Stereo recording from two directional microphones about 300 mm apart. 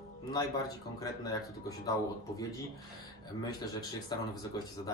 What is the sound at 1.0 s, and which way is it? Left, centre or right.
Speech, centre.